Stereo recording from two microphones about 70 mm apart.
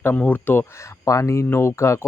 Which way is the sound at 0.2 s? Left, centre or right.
Left.